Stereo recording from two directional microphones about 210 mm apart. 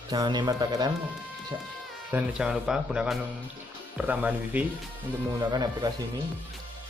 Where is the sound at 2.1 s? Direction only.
5° right (ahead or behind).